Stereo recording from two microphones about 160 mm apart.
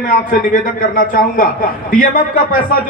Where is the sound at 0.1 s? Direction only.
60° left (ahead or behind).